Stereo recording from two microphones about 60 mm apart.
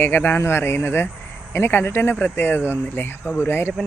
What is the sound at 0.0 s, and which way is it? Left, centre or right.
Speech, left.